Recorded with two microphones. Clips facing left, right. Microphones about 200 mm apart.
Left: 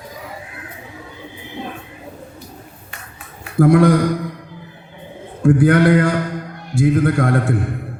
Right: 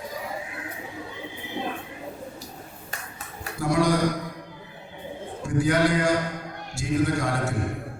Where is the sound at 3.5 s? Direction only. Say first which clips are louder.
Left 10 dB; 55° left (ahead or behind).